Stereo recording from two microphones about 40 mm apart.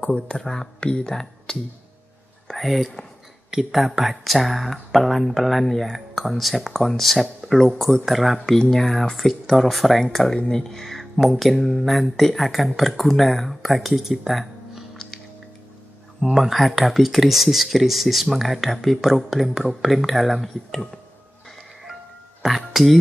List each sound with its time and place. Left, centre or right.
0.3 s speech: centre
0.7 s speech: left
1.0 s speech: centre
2.4 s a sound: centre
3.4 s speech: centre
8.0 s speech: centre
8.5 s speech: centre
16.2 s speech: centre
22.7 s music: centre